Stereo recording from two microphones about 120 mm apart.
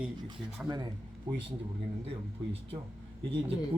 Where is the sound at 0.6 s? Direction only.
15° right (ahead or behind).